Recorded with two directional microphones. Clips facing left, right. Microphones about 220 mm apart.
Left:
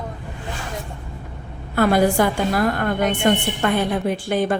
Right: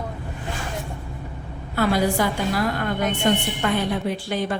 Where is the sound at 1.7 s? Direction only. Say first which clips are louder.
Left 4 dB; 50° left (ahead or behind).